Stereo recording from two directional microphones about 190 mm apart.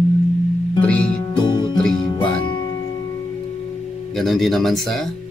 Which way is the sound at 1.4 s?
25° left (ahead or behind).